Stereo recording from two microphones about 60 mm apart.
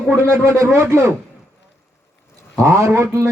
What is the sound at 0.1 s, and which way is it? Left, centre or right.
Speech, right.